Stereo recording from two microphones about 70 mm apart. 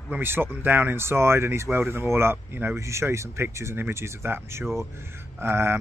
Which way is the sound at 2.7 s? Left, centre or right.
Right.